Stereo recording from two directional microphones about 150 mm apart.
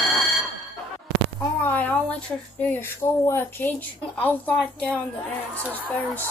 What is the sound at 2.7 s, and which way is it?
A woman's voice, 15° left (ahead or behind).